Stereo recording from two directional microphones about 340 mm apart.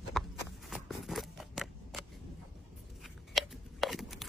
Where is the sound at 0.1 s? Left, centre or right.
Centre.